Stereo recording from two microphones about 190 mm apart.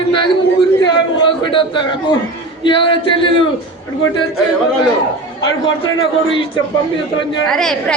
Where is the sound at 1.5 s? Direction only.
25° left (ahead or behind).